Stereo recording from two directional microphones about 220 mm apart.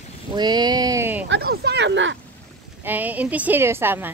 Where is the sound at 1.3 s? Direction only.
45° right (ahead or behind).